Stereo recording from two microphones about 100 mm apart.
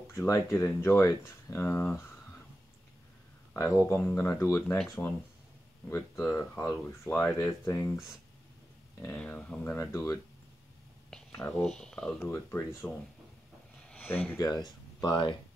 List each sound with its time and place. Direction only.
0.1 s speech: 25° left (ahead or behind)
3.5 s speech: 25° left (ahead or behind)
6.8 s speech: 15° left (ahead or behind)
7.6 s speech: 30° left (ahead or behind)
9.1 s speech: 10° left (ahead or behind)
9.8 s speech: 30° left (ahead or behind)
11.1 s a sound: 5° left (ahead or behind)
11.8 s speech: 10° left (ahead or behind)
12.2 s speech: 20° left (ahead or behind)
13.8 s a sound: 15° left (ahead or behind)
14.4 s speech: 45° left (ahead or behind)